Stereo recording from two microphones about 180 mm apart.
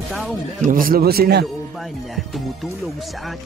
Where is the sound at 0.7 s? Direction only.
50° right (ahead or behind).